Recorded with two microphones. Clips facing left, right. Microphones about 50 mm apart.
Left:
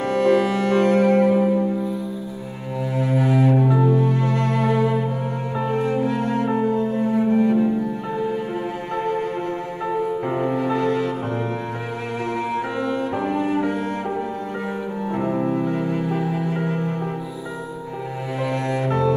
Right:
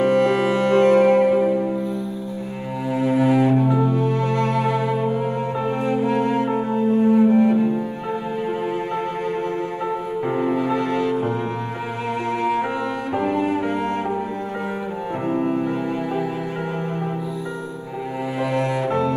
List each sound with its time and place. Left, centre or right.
0.0 s music: right
4.3 s music: right
7.0 s cello: centre
9.8 s music: centre
12.3 s music: right
18.4 s cello: centre